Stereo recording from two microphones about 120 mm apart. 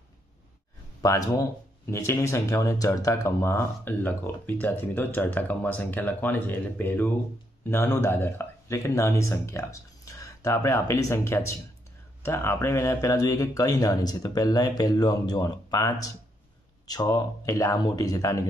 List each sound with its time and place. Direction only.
1.0 s speech: 30° left (ahead or behind)